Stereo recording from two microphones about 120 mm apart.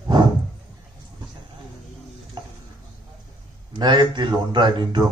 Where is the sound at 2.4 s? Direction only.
35° right (ahead or behind).